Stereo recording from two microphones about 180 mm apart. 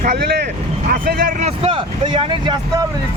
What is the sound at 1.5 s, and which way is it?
Speech, 30° right (ahead or behind).